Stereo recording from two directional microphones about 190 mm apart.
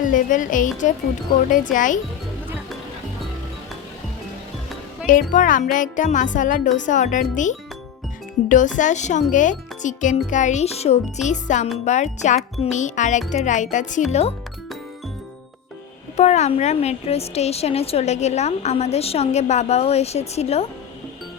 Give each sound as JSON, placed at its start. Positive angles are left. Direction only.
{"t": 0.0, "sound": "speech", "side_deg": 45}
{"t": 5.0, "sound": "a woman's voice", "side_deg": 45}
{"t": 16.1, "sound": "a woman's voice", "side_deg": 35}